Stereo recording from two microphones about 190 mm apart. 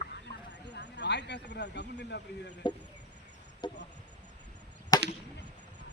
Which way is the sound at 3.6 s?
25° left (ahead or behind).